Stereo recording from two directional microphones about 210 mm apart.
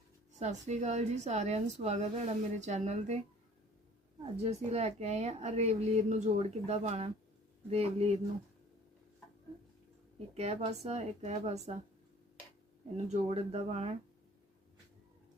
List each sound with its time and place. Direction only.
0.3 s a woman's voice: 35° right (ahead or behind)
4.4 s a woman's voice: 30° right (ahead or behind)
10.3 s a woman's voice: 30° right (ahead or behind)
13.1 s speech: 30° right (ahead or behind)